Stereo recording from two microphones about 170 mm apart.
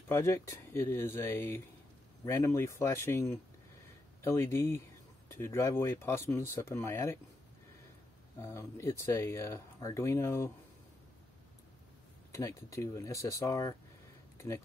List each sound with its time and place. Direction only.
0.1 s speech: 15° left (ahead or behind)
8.4 s speech: 15° left (ahead or behind)
12.3 s speech: 15° left (ahead or behind)